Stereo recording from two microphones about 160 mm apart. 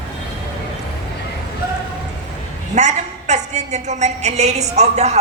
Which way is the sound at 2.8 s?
45° right (ahead or behind).